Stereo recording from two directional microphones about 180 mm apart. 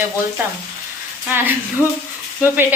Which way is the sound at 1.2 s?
10° right (ahead or behind).